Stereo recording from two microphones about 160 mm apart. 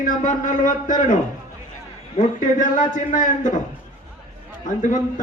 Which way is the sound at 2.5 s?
55° left (ahead or behind).